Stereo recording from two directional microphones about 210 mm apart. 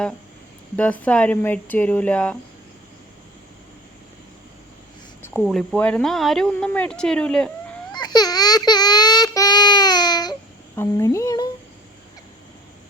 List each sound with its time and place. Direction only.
0.8 s speech: 5° left (ahead or behind)
5.2 s speech: 5° left (ahead or behind)
7.9 s child singing: 20° left (ahead or behind)
10.8 s speech: 15° left (ahead or behind)